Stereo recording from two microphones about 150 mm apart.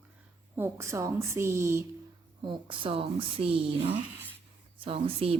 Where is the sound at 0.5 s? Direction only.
20° right (ahead or behind).